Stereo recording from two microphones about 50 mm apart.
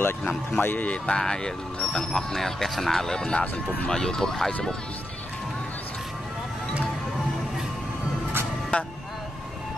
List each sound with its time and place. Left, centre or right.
0.6 s speech: left
0.8 s speech: centre
8.7 s speech: left